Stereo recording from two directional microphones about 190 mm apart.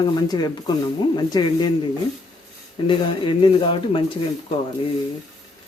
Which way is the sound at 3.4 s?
25° left (ahead or behind).